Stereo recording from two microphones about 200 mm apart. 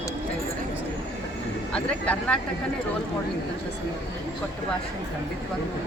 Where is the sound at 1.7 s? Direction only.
5° left (ahead or behind).